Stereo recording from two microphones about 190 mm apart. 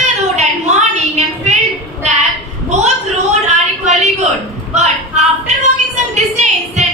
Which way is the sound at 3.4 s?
35° right (ahead or behind).